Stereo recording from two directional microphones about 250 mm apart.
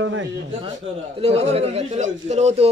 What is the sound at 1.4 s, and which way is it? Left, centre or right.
Speech, right.